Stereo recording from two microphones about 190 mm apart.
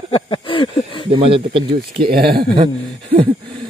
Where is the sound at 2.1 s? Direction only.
55° right (ahead or behind).